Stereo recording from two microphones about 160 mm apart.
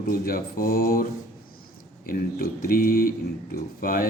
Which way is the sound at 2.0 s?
65° left (ahead or behind).